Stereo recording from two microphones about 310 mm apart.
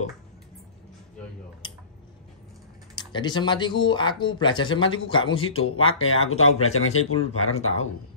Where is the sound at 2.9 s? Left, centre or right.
Centre.